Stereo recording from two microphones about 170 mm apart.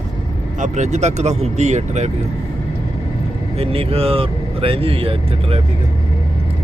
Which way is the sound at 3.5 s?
35° right (ahead or behind).